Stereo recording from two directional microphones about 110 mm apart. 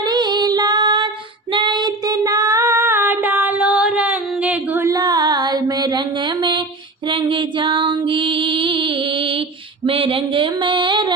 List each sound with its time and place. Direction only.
0.0 s female singing: 40° right (ahead or behind); by 4.9 s 15° right (ahead or behind)
4.9 s carnatic music: 35° right (ahead or behind)
7.1 s music: 50° right (ahead or behind)
9.8 s a sound: 55° right (ahead or behind)